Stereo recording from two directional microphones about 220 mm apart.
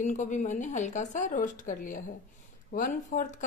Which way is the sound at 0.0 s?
35° left (ahead or behind).